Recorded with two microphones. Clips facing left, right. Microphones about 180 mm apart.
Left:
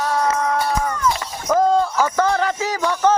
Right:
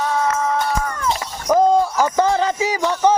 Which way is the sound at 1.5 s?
15° right (ahead or behind).